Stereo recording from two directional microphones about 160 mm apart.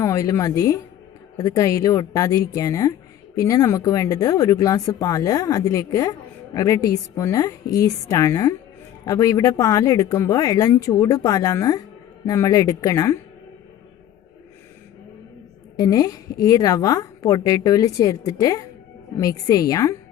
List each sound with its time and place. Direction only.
0.0 s speech: 20° left (ahead or behind)
15.7 s speech: 25° left (ahead or behind)